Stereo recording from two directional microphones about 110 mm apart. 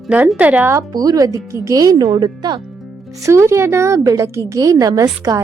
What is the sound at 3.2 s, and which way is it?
A woman's voice, 25° right (ahead or behind).